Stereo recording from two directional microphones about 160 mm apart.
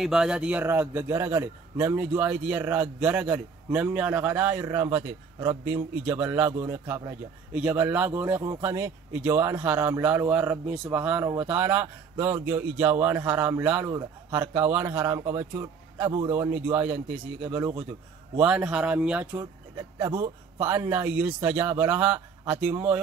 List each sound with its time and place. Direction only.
0.0 s a man's voice: 5° right (ahead or behind)
20.0 s a man's voice: 20° right (ahead or behind)